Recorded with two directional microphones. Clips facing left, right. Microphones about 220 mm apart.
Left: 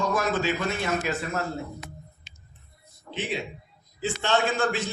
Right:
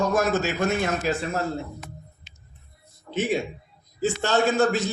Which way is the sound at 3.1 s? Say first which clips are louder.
Right 7 dB; 45° right (ahead or behind).